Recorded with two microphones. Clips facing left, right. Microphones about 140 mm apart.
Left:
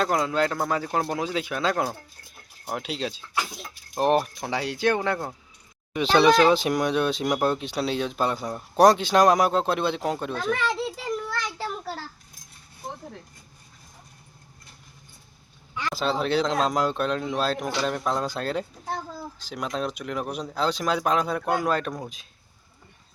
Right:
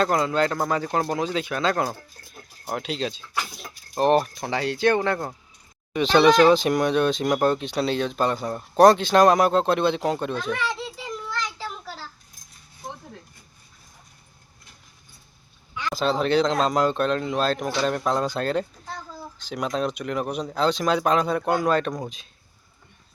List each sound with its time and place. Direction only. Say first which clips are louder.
0.0 s speech: right 2 dB; centre (ahead or behind)
11.3 s a sound: left 1 dB; 55° left (ahead or behind)
15.7 s speech: right 2 dB; 5° left (ahead or behind)